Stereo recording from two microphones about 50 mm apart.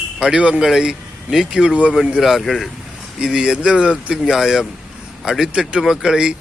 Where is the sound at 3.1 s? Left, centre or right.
Centre.